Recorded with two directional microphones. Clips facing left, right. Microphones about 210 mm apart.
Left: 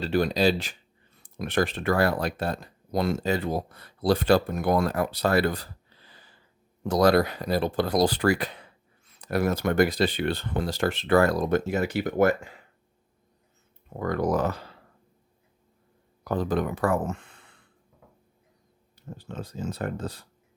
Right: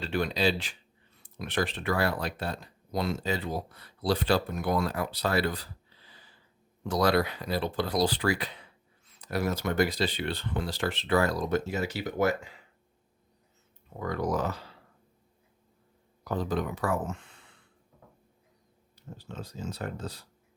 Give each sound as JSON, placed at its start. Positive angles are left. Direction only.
{"t": 0.0, "sound": "speech", "side_deg": 40}
{"t": 6.1, "sound": "a sound", "side_deg": 50}
{"t": 6.8, "sound": "speech", "side_deg": 45}
{"t": 14.0, "sound": "speech", "side_deg": 55}
{"t": 16.2, "sound": "speech", "side_deg": 55}
{"t": 19.1, "sound": "speech", "side_deg": 55}